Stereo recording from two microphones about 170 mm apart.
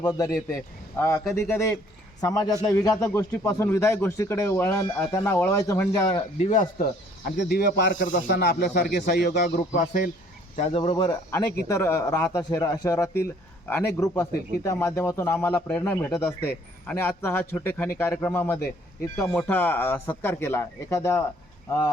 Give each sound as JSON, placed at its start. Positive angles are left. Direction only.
{"t": 0.0, "sound": "a man's voice", "side_deg": 20}
{"t": 6.1, "sound": "a man's voice", "side_deg": 30}
{"t": 6.5, "sound": "speech", "side_deg": 50}
{"t": 7.4, "sound": "speech", "side_deg": 65}
{"t": 10.6, "sound": "a man's voice", "side_deg": 35}